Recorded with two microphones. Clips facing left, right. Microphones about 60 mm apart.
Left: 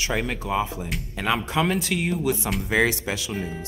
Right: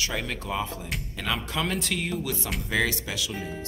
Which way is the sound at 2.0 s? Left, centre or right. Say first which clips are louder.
Left 6 dB; left.